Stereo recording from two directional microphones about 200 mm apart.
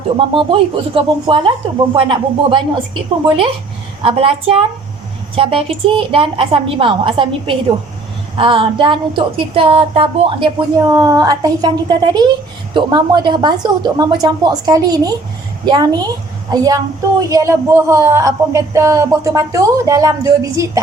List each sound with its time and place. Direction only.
0.2 s a woman's voice: 25° right (ahead or behind)
11.0 s a woman's voice: 15° right (ahead or behind)